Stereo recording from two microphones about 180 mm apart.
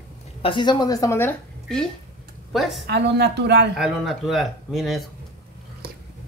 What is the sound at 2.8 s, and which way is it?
Speech, 70° right (ahead or behind).